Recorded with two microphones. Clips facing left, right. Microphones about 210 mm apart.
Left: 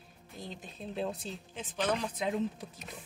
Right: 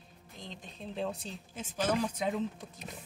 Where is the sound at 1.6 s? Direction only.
10° right (ahead or behind).